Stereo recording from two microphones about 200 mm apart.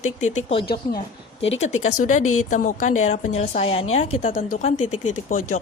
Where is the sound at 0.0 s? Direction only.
35° left (ahead or behind).